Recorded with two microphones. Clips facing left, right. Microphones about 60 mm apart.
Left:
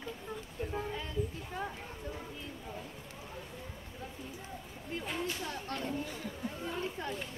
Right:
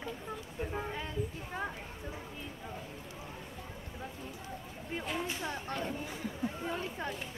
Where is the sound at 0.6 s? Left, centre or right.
Centre.